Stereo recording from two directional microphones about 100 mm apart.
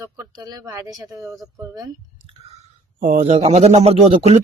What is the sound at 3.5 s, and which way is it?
Speech, 90° right.